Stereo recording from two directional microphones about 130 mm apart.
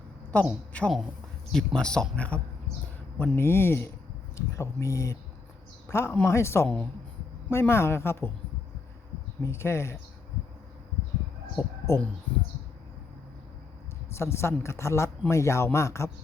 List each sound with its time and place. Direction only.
0.3 s speech: 10° left (ahead or behind)
9.4 s speech: 20° left (ahead or behind)
11.6 s speech: 25° left (ahead or behind)
14.1 s speech: 20° left (ahead or behind)